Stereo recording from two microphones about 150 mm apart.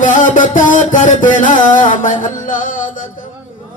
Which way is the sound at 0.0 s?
60° left (ahead or behind).